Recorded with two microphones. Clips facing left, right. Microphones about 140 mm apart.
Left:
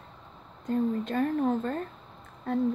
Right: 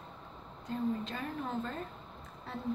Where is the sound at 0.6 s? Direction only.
50° left (ahead or behind).